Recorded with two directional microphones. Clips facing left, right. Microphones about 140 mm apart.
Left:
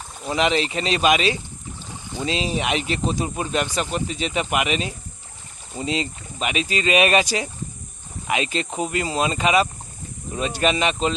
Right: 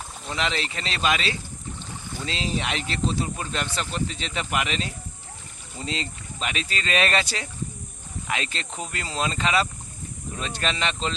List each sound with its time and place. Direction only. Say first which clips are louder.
0.3 s speech: left 8 dB; 15° left (ahead or behind)